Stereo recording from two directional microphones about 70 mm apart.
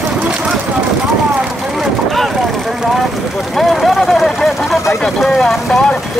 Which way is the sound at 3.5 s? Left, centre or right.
Centre.